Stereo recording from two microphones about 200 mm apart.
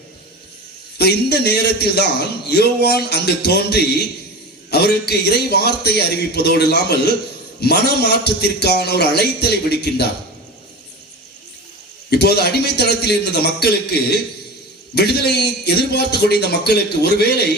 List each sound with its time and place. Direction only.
0.9 s a man's voice: 55° left (ahead or behind)
12.1 s a man's voice: 55° left (ahead or behind)
14.9 s a man's voice: 55° left (ahead or behind)